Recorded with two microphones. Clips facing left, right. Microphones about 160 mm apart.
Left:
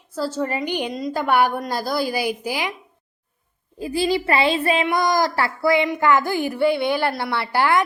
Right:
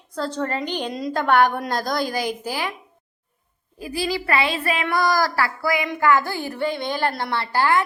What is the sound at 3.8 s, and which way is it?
A woman's voice, 25° left (ahead or behind).